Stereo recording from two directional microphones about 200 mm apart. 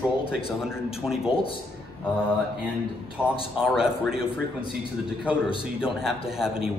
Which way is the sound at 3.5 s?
5° right (ahead or behind).